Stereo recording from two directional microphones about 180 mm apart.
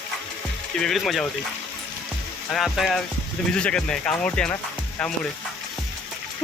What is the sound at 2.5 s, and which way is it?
Speech, centre (ahead or behind).